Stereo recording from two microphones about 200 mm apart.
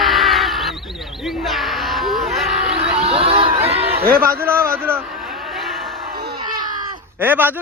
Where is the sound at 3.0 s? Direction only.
30° right (ahead or behind).